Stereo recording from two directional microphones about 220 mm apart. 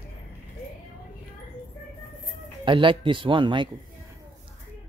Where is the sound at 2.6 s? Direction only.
20° right (ahead or behind).